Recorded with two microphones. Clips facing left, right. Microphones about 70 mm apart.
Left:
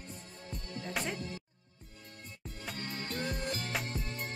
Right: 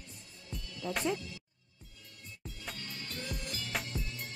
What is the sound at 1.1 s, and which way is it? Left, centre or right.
Speech, left.